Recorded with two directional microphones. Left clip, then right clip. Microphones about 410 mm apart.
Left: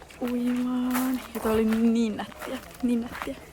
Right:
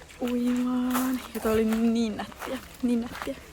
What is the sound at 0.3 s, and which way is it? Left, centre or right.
Speech, centre.